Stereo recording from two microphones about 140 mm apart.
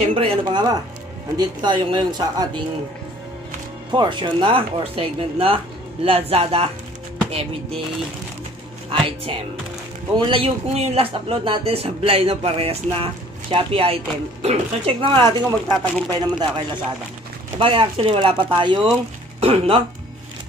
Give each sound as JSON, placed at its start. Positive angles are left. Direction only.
{"t": 0.1, "sound": "speech", "side_deg": -35}
{"t": 3.9, "sound": "speech", "side_deg": -35}
{"t": 8.9, "sound": "speech", "side_deg": -40}
{"t": 19.4, "sound": "speech", "side_deg": -45}